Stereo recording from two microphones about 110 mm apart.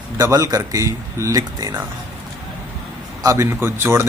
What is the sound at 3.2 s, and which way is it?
Speech, 30° right (ahead or behind).